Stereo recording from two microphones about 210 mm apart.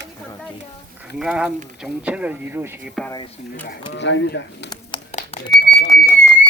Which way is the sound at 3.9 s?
60° left (ahead or behind).